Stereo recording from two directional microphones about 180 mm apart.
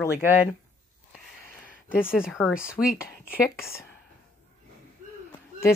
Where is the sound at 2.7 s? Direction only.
55° left (ahead or behind).